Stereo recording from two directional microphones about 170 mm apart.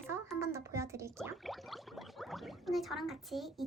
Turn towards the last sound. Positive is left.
turn(degrees=0)  # may be behind; listen again after turning